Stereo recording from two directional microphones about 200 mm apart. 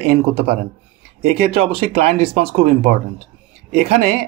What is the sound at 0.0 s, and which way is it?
Speech, 30° right (ahead or behind).